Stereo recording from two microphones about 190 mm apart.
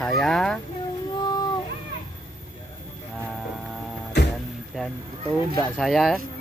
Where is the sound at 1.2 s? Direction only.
20° left (ahead or behind).